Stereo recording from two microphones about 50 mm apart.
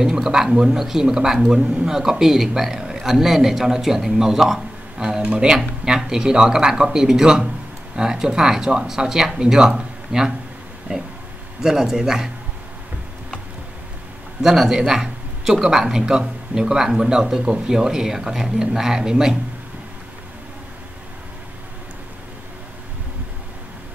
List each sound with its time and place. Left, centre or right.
0.0 s a man's voice: centre
14.4 s a man's voice: centre
14.8 s a sound: centre
15.7 s a man's voice: centre